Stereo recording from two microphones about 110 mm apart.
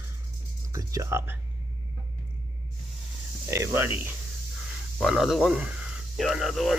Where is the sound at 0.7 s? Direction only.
30° right (ahead or behind).